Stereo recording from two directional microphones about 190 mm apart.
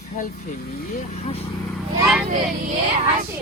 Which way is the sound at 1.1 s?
35° left (ahead or behind).